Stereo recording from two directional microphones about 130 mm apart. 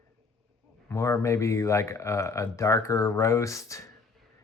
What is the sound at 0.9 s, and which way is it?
Speech, 20° left (ahead or behind).